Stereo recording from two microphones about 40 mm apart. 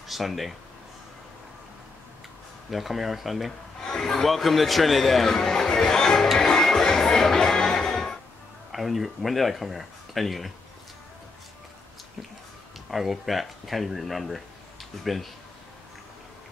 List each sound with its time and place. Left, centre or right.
0.1 s speech: centre
2.7 s speech: centre
3.8 s speech: centre
4.3 s speech: centre
6.3 s music: centre
8.7 s speech: centre
12.9 s speech: centre